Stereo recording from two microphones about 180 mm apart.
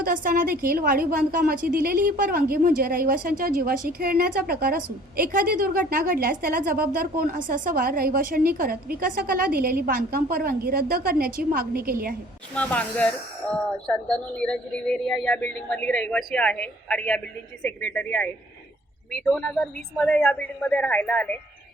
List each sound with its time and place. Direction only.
0.0 s a woman's voice: 50° right (ahead or behind)
12.5 s speech: 5° left (ahead or behind)